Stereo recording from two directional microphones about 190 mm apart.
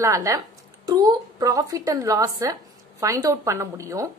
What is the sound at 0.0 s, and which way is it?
Speech, 15° right (ahead or behind).